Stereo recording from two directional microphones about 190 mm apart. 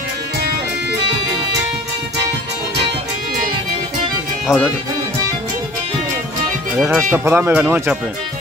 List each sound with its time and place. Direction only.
4.5 s speech: centre (ahead or behind)
6.8 s speech: 10° right (ahead or behind)